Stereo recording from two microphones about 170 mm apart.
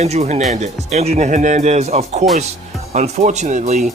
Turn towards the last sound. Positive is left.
turn(degrees=-45)  # may be behind; listen again after turning